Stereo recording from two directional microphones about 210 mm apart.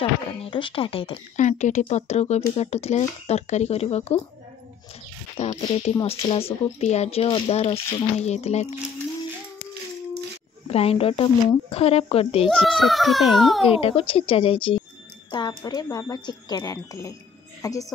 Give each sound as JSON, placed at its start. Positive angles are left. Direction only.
{"t": 0.0, "sound": "speech", "side_deg": 25}
{"t": 5.4, "sound": "speech", "side_deg": 30}
{"t": 10.7, "sound": "speech", "side_deg": 30}
{"t": 12.4, "sound": "a child's voice", "side_deg": 0}
{"t": 13.7, "sound": "a woman's voice", "side_deg": 25}